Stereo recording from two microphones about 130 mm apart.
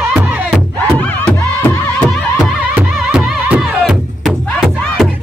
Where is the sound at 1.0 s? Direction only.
10° left (ahead or behind).